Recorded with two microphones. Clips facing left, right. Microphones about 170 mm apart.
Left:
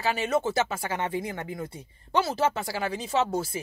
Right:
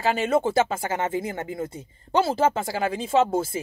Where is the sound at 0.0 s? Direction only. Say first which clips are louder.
Right 4 dB; 50° right (ahead or behind).